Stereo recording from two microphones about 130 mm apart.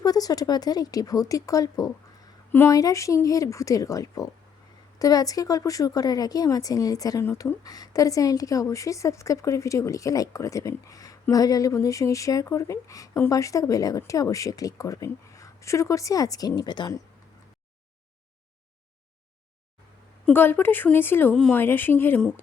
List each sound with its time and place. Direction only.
0.0 s speech: 30° left (ahead or behind)
20.3 s speech: 15° left (ahead or behind)